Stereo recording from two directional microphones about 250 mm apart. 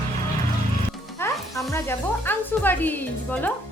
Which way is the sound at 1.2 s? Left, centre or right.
Centre.